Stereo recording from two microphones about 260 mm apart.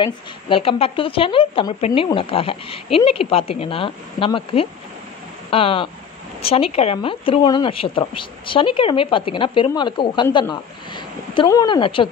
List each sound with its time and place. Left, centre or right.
0.0 s speech: left